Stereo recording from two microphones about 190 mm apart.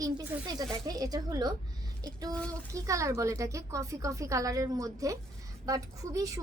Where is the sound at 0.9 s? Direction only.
20° right (ahead or behind).